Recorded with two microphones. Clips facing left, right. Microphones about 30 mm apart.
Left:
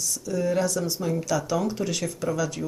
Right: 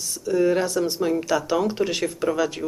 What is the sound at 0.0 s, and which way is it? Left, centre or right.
Speech, right.